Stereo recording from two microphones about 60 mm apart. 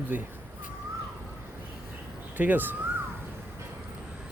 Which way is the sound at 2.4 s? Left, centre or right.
Right.